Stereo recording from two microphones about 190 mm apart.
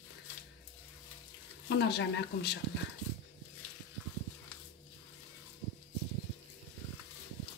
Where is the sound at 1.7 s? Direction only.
60° left (ahead or behind).